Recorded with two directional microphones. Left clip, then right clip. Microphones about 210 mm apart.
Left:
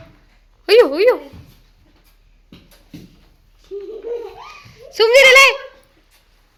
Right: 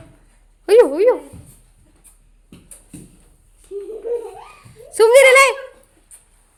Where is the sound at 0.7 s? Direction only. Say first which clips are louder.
Even; 15° right (ahead or behind).